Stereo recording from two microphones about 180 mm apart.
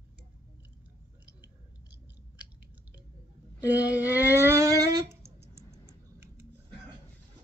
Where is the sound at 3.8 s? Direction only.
10° right (ahead or behind).